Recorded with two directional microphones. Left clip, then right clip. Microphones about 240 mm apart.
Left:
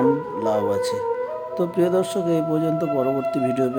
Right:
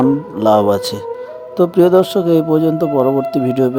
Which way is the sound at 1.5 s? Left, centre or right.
Right.